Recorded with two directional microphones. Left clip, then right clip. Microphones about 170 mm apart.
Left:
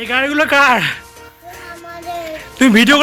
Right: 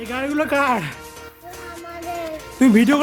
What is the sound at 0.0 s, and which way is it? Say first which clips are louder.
Speech: left 8 dB; centre (ahead or behind).